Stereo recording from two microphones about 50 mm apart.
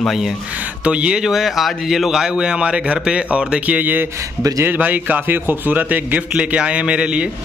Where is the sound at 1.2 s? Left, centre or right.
Centre; by 6.2 s right.